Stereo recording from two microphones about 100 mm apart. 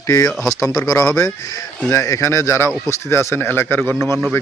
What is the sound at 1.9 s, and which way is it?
A man's voice, 30° left (ahead or behind).